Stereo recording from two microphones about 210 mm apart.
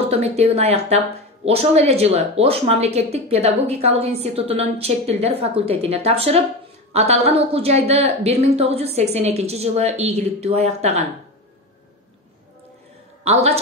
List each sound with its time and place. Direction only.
0.1 s a woman's voice: 30° right (ahead or behind)
13.2 s a man's voice: 30° right (ahead or behind)